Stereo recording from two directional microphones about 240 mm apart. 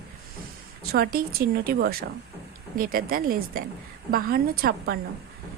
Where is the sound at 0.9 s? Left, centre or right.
Right.